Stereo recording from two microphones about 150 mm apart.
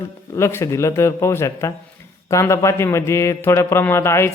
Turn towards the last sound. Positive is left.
turn(degrees=15)  # may be behind; listen again after turning